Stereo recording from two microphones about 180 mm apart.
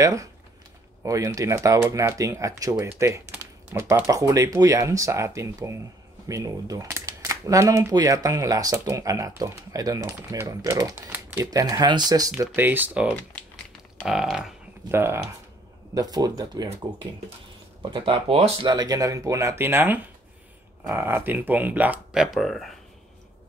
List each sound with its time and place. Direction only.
0.0 s speech: 15° right (ahead or behind)
12.4 s speech: 10° right (ahead or behind)
13.9 s a sound: centre (ahead or behind)
14.9 s speech: 15° right (ahead or behind)
17.9 s speech: 30° right (ahead or behind); by 22.8 s centre (ahead or behind)